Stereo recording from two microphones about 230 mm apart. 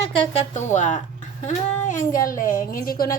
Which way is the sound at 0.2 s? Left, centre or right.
Left.